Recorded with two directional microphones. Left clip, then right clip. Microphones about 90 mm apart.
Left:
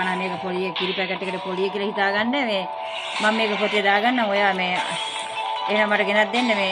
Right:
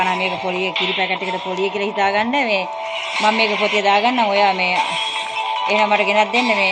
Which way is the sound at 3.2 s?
10° left (ahead or behind).